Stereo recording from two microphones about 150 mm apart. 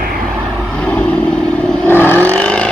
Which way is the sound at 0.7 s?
5° left (ahead or behind).